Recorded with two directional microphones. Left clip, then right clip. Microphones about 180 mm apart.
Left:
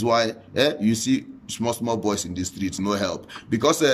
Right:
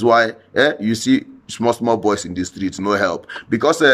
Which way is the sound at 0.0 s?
15° left (ahead or behind).